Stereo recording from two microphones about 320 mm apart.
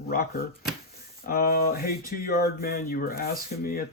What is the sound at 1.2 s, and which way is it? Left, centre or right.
Speech, left.